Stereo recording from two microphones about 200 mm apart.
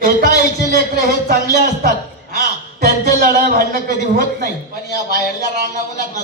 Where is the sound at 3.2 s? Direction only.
45° right (ahead or behind).